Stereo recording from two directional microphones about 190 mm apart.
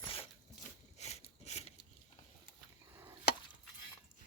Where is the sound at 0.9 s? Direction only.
35° left (ahead or behind).